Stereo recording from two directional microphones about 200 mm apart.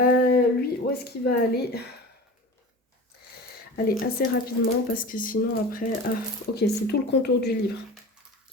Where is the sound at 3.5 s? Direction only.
50° left (ahead or behind).